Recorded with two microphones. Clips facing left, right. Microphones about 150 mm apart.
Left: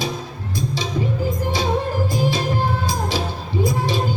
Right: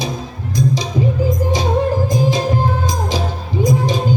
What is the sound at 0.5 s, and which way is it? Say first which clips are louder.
Music: right 7 dB; 15° right (ahead or behind).